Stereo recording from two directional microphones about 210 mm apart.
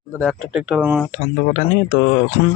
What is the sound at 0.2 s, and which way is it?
Speech, centre (ahead or behind).